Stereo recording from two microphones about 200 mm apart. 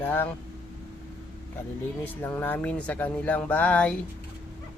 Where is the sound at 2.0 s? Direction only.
10° left (ahead or behind).